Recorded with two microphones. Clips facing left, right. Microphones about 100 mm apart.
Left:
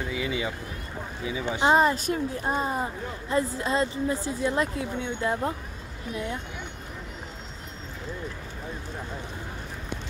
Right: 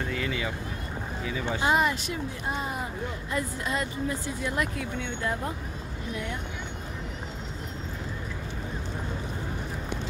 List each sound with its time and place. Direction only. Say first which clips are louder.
0.0 s speech: left 1 dB; 5° left (ahead or behind)
1.7 s speech: left 5 dB; 35° left (ahead or behind)